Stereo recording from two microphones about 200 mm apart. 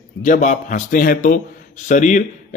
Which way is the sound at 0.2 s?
40° left (ahead or behind).